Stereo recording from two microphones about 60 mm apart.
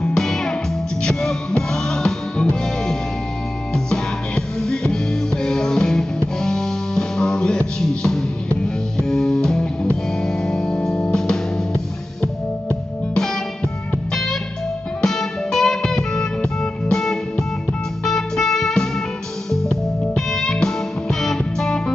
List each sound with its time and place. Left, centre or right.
0.0 s music: centre
3.7 s music: centre
13.1 s music: centre
15.0 s music: centre